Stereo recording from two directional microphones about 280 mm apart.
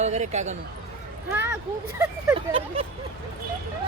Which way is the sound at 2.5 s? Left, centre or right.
Centre.